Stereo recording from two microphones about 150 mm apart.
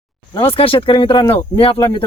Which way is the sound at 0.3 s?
35° left (ahead or behind).